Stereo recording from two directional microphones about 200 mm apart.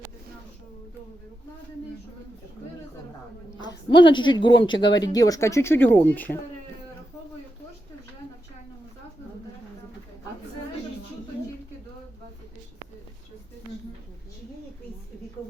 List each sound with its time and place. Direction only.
3.6 s a woman's voice: 20° left (ahead or behind)